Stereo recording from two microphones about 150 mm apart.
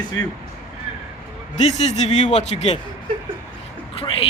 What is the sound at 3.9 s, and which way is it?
Speech, 40° left (ahead or behind).